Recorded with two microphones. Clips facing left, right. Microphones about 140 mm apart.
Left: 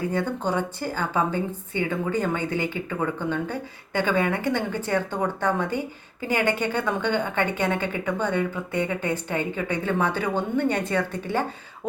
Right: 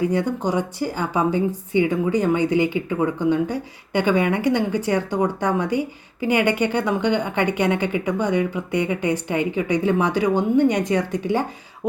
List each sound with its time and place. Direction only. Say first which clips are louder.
0.1 s speech: right 4 dB; 15° right (ahead or behind)